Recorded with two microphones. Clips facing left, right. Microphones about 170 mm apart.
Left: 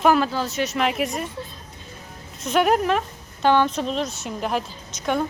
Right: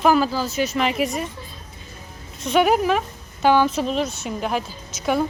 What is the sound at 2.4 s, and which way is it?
Speech, centre (ahead or behind).